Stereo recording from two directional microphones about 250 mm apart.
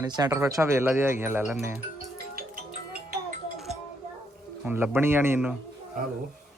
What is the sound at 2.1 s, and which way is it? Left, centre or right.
Music, right.